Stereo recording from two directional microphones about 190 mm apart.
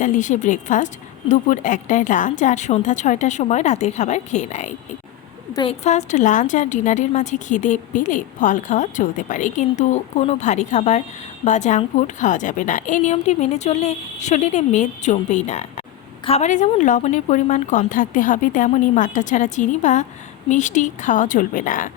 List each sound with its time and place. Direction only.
0.0 s speech: 40° left (ahead or behind)
5.8 s a woman's voice: 40° left (ahead or behind)